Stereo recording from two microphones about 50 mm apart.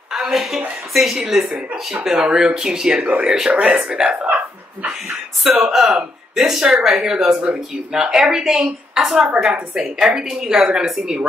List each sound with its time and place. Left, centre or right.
0.1 s a woman's voice: centre; by 3.3 s right
3.3 s a woman's voice: centre
3.5 s speech: right
5.4 s a woman's voice: centre
5.7 s a woman's voice: centre